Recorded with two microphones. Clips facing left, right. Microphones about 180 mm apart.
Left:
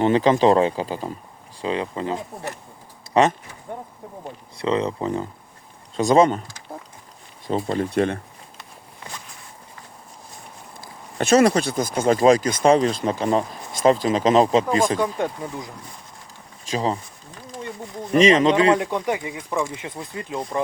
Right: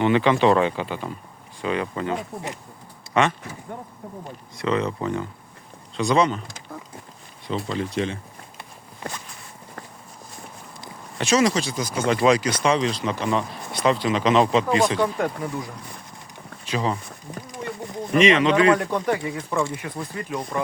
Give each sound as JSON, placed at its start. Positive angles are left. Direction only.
{"t": 0.0, "sound": "speech", "side_deg": 35}
{"t": 3.1, "sound": "speech", "side_deg": 35}
{"t": 4.5, "sound": "speech", "side_deg": 30}
{"t": 6.0, "sound": "speech", "side_deg": 45}
{"t": 7.4, "sound": "speech", "side_deg": 45}
{"t": 11.2, "sound": "speech", "side_deg": 55}
{"t": 15.0, "sound": "speech", "side_deg": 20}
{"t": 16.7, "sound": "speech", "side_deg": 30}
{"t": 18.1, "sound": "speech", "side_deg": 35}
{"t": 18.5, "sound": "speech", "side_deg": 25}